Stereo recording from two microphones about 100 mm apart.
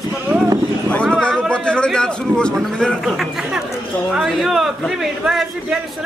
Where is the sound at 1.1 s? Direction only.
10° left (ahead or behind).